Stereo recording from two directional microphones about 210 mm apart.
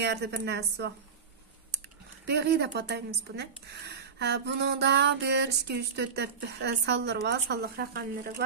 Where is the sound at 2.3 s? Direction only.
50° right (ahead or behind).